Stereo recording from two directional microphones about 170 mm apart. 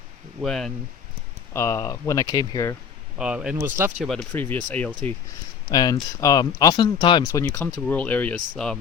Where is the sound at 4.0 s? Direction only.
5° left (ahead or behind).